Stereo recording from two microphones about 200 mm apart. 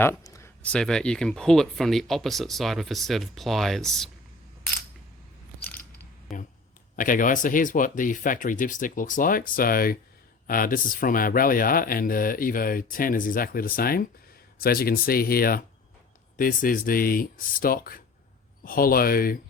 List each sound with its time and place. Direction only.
0.0 s speech: 15° left (ahead or behind)
5.6 s mechanisms: 10° left (ahead or behind)
6.3 s speech: centre (ahead or behind)
6.9 s speech: 40° left (ahead or behind)